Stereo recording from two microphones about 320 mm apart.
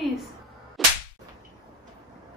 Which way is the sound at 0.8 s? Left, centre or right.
Centre.